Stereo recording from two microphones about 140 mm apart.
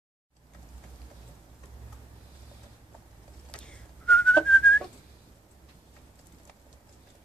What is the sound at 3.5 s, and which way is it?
Whistling, 5° left (ahead or behind).